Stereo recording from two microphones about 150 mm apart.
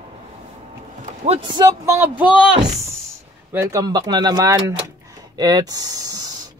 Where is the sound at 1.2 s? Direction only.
45° right (ahead or behind).